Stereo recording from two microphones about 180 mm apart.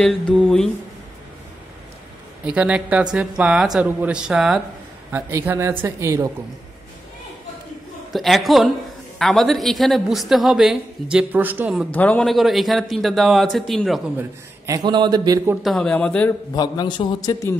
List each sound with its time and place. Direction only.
0.0 s a woman's voice: 5° left (ahead or behind)
2.4 s a woman's voice: 5° right (ahead or behind)
8.1 s a woman's voice: centre (ahead or behind)
11.9 s a woman's voice: 10° left (ahead or behind)
14.7 s a man's voice: 20° right (ahead or behind)
15.6 s a man's voice: centre (ahead or behind)
16.5 s a man's voice: 25° left (ahead or behind)